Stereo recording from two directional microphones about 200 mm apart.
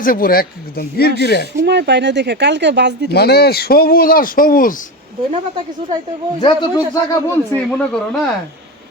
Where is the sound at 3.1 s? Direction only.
55° left (ahead or behind).